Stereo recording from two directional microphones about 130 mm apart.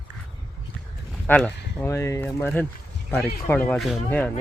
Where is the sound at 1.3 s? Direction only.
15° left (ahead or behind).